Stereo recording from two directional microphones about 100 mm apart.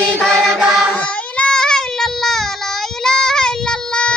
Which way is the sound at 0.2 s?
5° left (ahead or behind).